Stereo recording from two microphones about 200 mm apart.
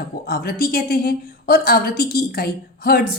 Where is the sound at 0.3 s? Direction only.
45° left (ahead or behind).